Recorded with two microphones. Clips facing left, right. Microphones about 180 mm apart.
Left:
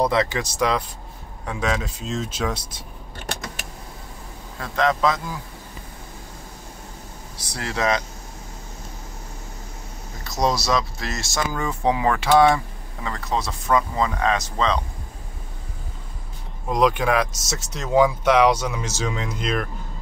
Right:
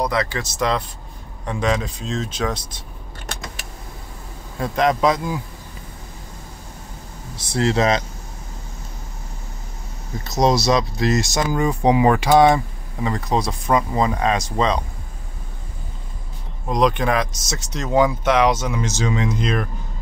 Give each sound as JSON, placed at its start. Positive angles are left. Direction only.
{"t": 0.0, "sound": "speech", "side_deg": 25}
{"t": 4.6, "sound": "a man's voice", "side_deg": -15}
{"t": 7.3, "sound": "speech", "side_deg": -25}
{"t": 10.2, "sound": "speech", "side_deg": -20}
{"t": 16.6, "sound": "speech", "side_deg": 5}